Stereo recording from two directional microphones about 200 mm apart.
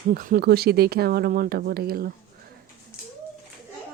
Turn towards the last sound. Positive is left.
turn(degrees=-50)  # may be behind; listen again after turning